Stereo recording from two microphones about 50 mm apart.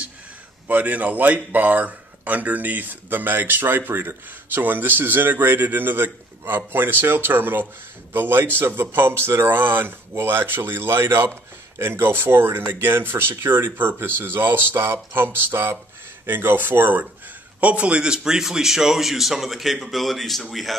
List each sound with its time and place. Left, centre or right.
0.7 s speech: right; by 20.4 s centre